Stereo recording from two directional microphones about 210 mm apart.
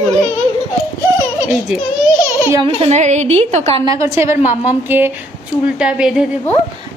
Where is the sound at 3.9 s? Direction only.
15° right (ahead or behind).